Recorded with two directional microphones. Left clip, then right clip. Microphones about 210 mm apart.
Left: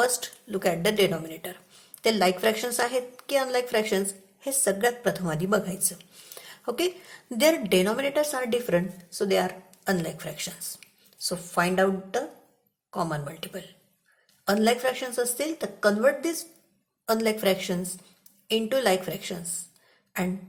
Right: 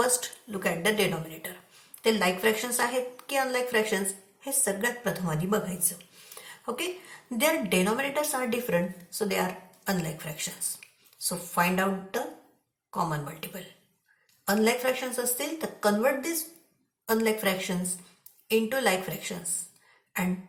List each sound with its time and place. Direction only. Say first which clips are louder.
0.0 s a woman's voice: left 2 dB; 45° left (ahead or behind)